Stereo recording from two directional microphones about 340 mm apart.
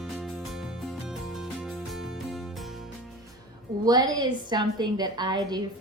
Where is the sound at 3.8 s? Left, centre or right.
Centre.